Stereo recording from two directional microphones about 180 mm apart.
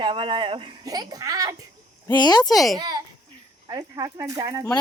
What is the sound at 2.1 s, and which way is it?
Speech, 20° left (ahead or behind).